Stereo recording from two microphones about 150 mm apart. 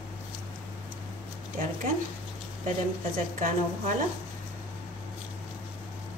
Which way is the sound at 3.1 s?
65° right (ahead or behind).